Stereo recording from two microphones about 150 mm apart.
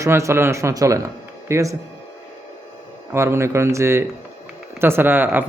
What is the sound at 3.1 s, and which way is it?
A man's voice, 15° right (ahead or behind).